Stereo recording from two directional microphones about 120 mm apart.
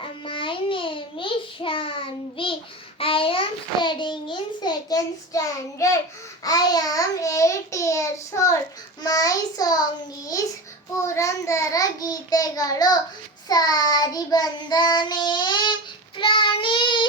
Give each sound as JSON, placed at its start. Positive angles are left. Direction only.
{"t": 0.0, "sound": "child singing", "side_deg": 45}
{"t": 3.0, "sound": "a sound", "side_deg": 50}
{"t": 6.4, "sound": "babbling", "side_deg": 30}
{"t": 9.0, "sound": "child singing", "side_deg": 30}
{"t": 10.9, "sound": "child singing", "side_deg": 25}